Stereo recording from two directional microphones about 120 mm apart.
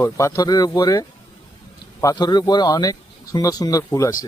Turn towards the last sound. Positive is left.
turn(degrees=25)  # may be behind; listen again after turning